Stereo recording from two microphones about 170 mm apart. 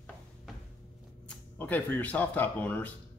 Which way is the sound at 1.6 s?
10° left (ahead or behind).